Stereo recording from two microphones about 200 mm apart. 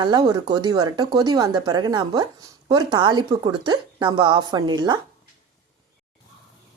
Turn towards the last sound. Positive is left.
turn(degrees=-20)  # may be behind; listen again after turning